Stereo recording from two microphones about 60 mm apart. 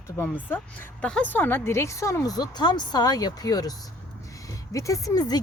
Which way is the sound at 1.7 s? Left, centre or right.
Left.